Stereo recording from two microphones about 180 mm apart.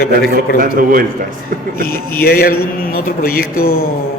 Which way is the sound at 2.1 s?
60° left (ahead or behind).